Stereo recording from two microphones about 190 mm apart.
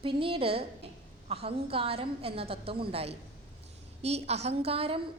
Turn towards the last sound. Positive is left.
turn(degrees=-30)  # may be behind; listen again after turning